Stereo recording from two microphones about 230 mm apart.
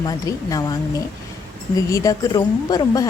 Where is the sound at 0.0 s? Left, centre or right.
Centre.